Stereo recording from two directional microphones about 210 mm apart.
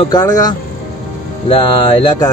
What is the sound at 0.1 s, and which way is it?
Speech, 15° left (ahead or behind).